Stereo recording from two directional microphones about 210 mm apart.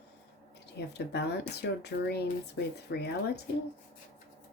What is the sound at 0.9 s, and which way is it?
Speech, 50° left (ahead or behind).